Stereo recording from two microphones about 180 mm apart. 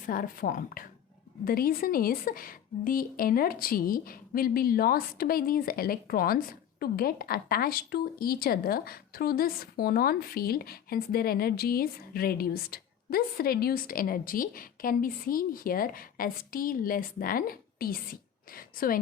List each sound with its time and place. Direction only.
0.0 s a woman's voice: 50° left (ahead or behind)